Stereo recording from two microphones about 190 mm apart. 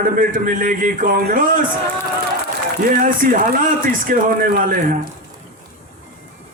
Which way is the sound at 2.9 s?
45° right (ahead or behind).